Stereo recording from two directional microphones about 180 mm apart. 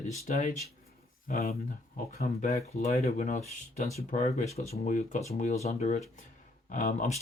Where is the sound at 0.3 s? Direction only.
45° left (ahead or behind).